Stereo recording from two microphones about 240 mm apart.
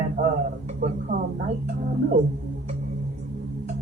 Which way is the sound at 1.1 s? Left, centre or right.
Right.